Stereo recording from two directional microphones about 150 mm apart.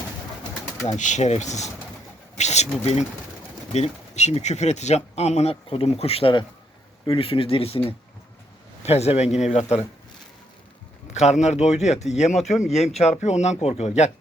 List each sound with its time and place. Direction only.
0.9 s speech: 55° left (ahead or behind); by 7.8 s 40° left (ahead or behind)
8.8 s speech: 45° left (ahead or behind)
11.1 s speech: 50° left (ahead or behind)